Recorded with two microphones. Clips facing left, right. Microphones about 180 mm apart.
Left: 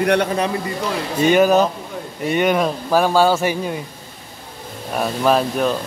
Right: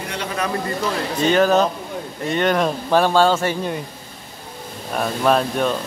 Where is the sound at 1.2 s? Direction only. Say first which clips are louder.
Left 2 dB; 10° left (ahead or behind).